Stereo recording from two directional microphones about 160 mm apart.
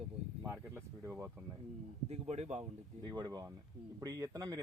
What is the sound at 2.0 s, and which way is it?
Speech, 40° right (ahead or behind).